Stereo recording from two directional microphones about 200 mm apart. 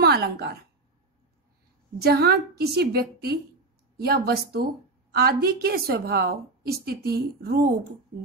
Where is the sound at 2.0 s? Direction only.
50° right (ahead or behind).